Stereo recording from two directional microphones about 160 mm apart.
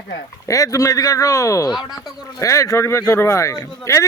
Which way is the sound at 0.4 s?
20° left (ahead or behind).